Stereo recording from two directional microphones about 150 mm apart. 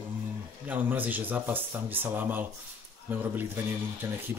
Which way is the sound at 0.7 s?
10° right (ahead or behind).